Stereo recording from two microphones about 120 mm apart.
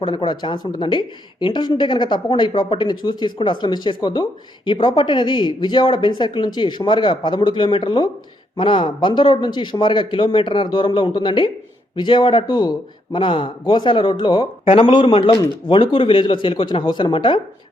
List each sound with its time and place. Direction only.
0.0 s speech: 40° left (ahead or behind)